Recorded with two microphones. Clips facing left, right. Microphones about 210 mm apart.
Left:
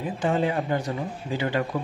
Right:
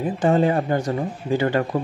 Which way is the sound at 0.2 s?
45° right (ahead or behind).